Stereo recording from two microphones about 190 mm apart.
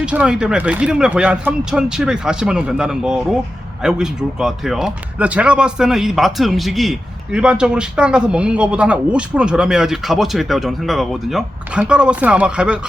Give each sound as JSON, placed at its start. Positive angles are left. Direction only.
{"t": 0.0, "sound": "a man's voice", "side_deg": -5}